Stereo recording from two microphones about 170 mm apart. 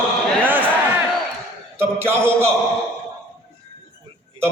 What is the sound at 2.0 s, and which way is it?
Speech, 15° right (ahead or behind).